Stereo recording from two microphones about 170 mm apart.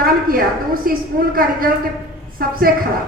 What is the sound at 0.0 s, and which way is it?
A woman's voice, 60° right (ahead or behind).